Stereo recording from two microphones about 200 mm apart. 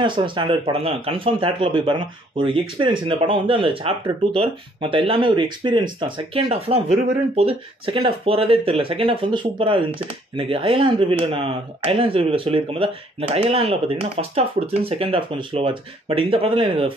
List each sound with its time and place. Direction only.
0.0 s speech: 25° right (ahead or behind)